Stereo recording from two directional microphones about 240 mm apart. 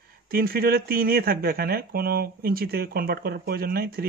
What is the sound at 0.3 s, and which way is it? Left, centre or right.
Speech, right.